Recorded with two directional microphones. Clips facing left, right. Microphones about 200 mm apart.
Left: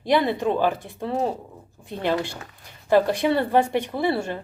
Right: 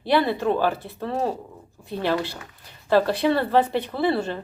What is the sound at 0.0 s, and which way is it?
Speech, 15° left (ahead or behind).